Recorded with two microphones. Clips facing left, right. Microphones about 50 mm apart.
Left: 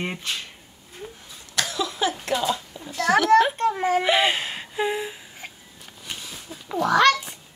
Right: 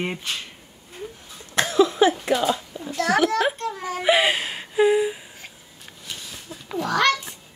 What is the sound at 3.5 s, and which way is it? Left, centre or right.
Speech, left.